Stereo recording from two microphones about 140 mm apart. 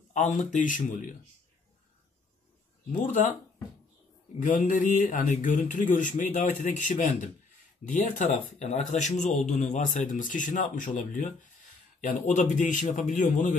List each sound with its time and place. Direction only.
0.1 s speech: 60° left (ahead or behind)
2.9 s speech: 60° left (ahead or behind)
4.4 s a man's voice: 65° left (ahead or behind)
7.9 s speech: 60° left (ahead or behind)